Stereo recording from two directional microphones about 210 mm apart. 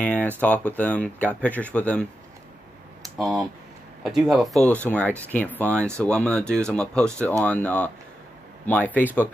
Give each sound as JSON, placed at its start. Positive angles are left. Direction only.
{"t": 0.0, "sound": "speech", "side_deg": 5}
{"t": 3.2, "sound": "speech", "side_deg": 0}